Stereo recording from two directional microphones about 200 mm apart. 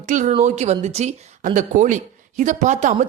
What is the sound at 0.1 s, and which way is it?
A woman's voice, 40° right (ahead or behind).